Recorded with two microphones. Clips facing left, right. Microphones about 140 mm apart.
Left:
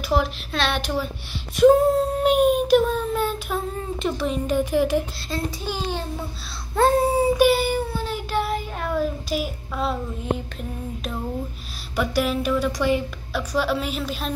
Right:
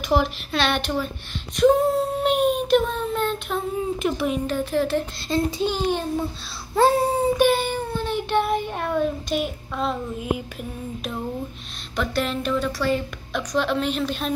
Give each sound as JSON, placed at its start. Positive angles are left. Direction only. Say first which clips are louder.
{"t": 0.1, "sound": "child singing", "louder": "right 2 dB", "side_deg": 0}
{"t": 4.5, "sound": "a woman's voice", "louder": "left 2 dB", "side_deg": 15}
{"t": 5.3, "sound": "a child's voice", "louder": "right 6 dB", "side_deg": -20}
{"t": 6.7, "sound": "child singing", "louder": "even", "side_deg": 0}
{"t": 8.8, "sound": "a child's voice", "louder": "right 1 dB", "side_deg": 5}
{"t": 12.0, "sound": "a woman's voice", "louder": "left 2 dB", "side_deg": 10}